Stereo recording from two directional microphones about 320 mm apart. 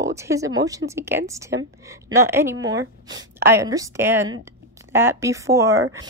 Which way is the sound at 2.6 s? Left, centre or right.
Right.